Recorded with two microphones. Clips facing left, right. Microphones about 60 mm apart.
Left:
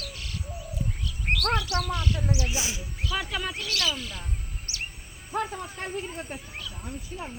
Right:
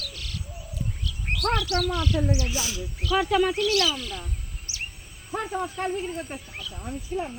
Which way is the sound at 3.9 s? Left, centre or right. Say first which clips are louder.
Right 3 dB; centre.